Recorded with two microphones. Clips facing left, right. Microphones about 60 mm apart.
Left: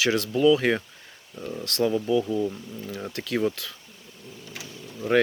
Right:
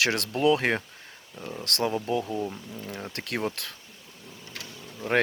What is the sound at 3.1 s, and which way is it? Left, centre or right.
Speech, right.